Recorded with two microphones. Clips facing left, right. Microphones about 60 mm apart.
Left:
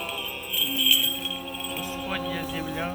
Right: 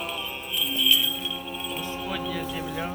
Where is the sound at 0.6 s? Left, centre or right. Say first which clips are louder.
Right 1 dB; centre.